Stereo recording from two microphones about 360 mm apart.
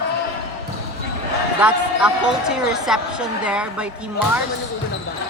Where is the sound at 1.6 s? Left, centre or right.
Centre.